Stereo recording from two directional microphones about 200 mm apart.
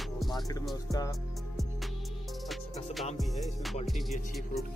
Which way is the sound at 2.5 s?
Centre (ahead or behind).